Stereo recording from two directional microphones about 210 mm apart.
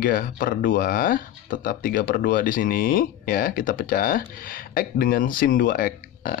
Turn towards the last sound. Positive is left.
turn(degrees=40)  # may be behind; listen again after turning